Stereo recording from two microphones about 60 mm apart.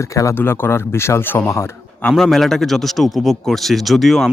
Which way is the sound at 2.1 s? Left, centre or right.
Centre.